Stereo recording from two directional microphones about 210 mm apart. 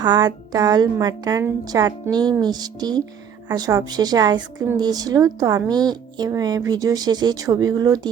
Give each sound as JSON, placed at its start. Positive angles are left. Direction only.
{"t": 0.0, "sound": "a woman's voice", "side_deg": -20}